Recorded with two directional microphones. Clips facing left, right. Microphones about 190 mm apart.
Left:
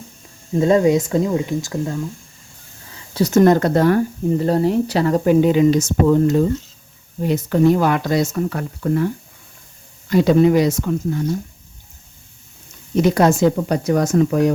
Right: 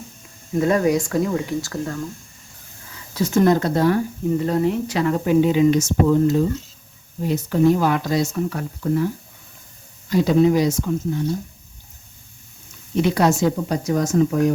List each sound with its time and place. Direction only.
0.5 s speech: 25° left (ahead or behind)
2.9 s a sound: 30° left (ahead or behind)
3.3 s speech: 55° left (ahead or behind)
4.4 s speech: 35° left (ahead or behind); by 6.3 s 55° left (ahead or behind)
7.3 s speech: 65° left (ahead or behind)
10.1 s speech: 65° left (ahead or behind)
13.0 s speech: 45° left (ahead or behind); by 14.5 s 70° left (ahead or behind)